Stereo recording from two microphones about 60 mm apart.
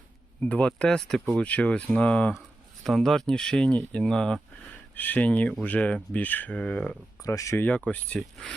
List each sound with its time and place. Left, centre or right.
0.4 s speech: left
0.9 s speech: centre
1.4 s speech: left
2.8 s speech: centre
4.9 s speech: left
7.2 s speech: left
7.6 s speech: left